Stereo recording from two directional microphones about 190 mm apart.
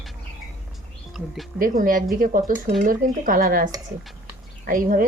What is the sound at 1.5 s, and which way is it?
A woman's voice, 45° right (ahead or behind).